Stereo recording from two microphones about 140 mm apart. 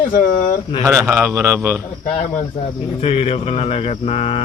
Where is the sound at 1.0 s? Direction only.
10° right (ahead or behind).